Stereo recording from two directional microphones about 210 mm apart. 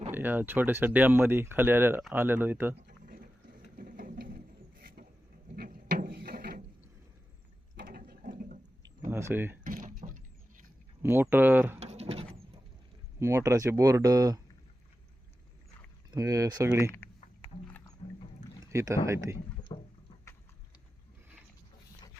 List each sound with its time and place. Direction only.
0.1 s speech: 10° right (ahead or behind)
2.8 s a sound: 45° right (ahead or behind)
3.8 s mechanisms: 40° right (ahead or behind)
7.8 s toilet flush: 45° right (ahead or behind)
9.0 s speech: 10° right (ahead or behind)
9.6 s a sound: 40° right (ahead or behind)
11.0 s speech: 10° right (ahead or behind)
11.8 s pigeon: 30° right (ahead or behind)
13.1 s speech: 15° right (ahead or behind)
16.1 s speech: 15° right (ahead or behind)
17.4 s music: 10° left (ahead or behind)
18.6 s speech: 15° right (ahead or behind)
19.7 s a sound: 25° left (ahead or behind)